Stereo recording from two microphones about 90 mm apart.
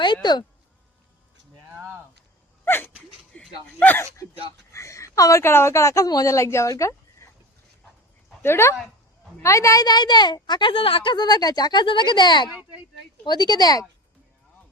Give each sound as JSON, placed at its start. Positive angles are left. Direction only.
{"t": 0.0, "sound": "speech", "side_deg": 55}
{"t": 2.6, "sound": "sneeze", "side_deg": 25}
{"t": 3.3, "sound": "a sound", "side_deg": 15}
{"t": 3.8, "sound": "speech", "side_deg": 20}
{"t": 4.7, "sound": "a woman's voice", "side_deg": 35}
{"t": 8.4, "sound": "a woman's voice", "side_deg": 30}